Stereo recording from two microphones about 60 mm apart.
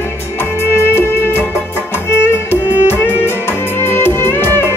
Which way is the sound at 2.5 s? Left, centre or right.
Left.